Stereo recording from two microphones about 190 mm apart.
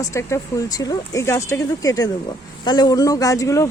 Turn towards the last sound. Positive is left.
turn(degrees=15)  # may be behind; listen again after turning